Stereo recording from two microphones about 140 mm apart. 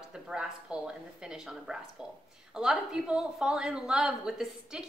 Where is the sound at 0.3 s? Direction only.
5° right (ahead or behind).